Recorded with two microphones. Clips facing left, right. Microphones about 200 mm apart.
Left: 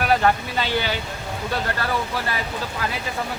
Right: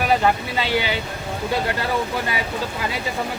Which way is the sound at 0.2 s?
10° right (ahead or behind).